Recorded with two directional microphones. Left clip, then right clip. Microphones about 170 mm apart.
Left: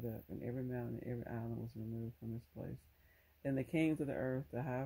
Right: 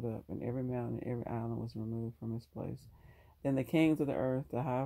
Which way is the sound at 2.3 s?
30° right (ahead or behind).